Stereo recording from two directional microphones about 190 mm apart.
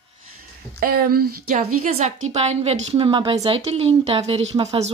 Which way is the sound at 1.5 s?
35° right (ahead or behind).